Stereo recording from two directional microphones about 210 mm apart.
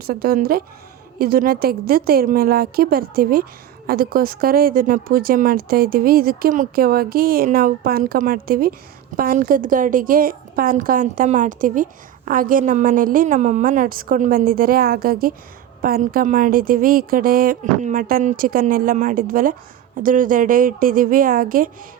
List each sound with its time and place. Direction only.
0.0 s a woman's voice: 45° right (ahead or behind)